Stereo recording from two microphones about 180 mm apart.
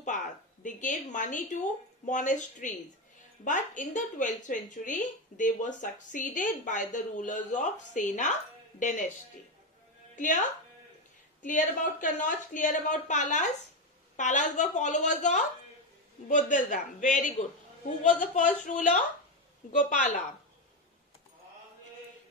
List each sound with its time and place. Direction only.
0.7 s a woman's voice: 45° left (ahead or behind)
10.1 s speech: 45° left (ahead or behind)
11.4 s a woman's voice: 45° left (ahead or behind)